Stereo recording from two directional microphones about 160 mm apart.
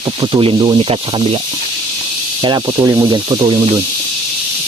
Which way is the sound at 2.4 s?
25° right (ahead or behind).